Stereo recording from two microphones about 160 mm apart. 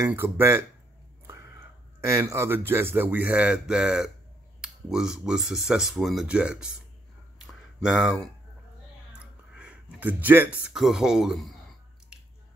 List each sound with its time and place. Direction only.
0.0 s speech: 15° right (ahead or behind)
1.2 s a sound: 15° right (ahead or behind)
2.0 s speech: 20° right (ahead or behind)
7.8 s speech: 5° right (ahead or behind)
9.2 s a sound: 5° right (ahead or behind)
10.6 s speech: 5° right (ahead or behind)